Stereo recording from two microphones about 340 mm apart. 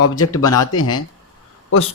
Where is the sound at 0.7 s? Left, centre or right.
Left.